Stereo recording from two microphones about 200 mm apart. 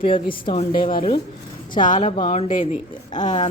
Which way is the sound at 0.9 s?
45° left (ahead or behind).